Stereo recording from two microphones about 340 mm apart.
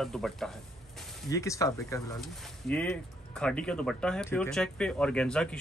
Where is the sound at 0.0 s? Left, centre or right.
Centre.